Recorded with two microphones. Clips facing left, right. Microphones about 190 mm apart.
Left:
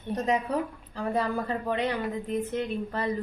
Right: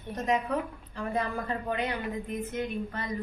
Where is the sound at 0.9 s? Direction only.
35° left (ahead or behind).